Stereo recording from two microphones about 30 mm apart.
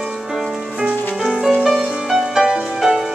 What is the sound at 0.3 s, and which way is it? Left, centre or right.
Music, centre.